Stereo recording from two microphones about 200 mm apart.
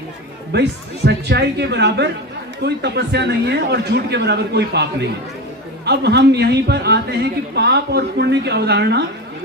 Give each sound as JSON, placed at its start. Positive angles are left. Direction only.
{"t": 0.5, "sound": "a man's voice", "side_deg": -55}